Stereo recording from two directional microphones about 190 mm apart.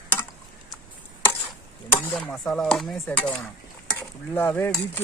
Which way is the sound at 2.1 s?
Centre (ahead or behind).